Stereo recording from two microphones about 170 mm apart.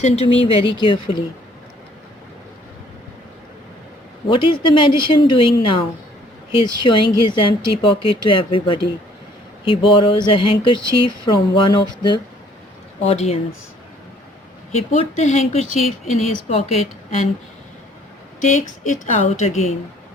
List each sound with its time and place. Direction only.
0.0 s a woman's voice: 35° left (ahead or behind)
4.3 s a woman's voice: 30° left (ahead or behind)
13.0 s a woman's voice: 40° left (ahead or behind)
14.7 s a woman's voice: 40° left (ahead or behind)
18.3 s a woman's voice: 45° left (ahead or behind)